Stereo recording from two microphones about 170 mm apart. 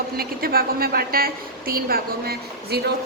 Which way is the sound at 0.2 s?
60° right (ahead or behind).